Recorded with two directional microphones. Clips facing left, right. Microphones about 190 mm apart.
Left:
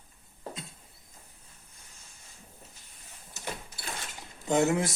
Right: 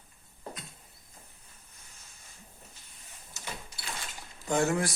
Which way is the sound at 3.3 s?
50° left (ahead or behind).